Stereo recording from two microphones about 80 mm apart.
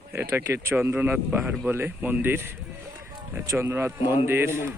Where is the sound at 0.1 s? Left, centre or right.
Right.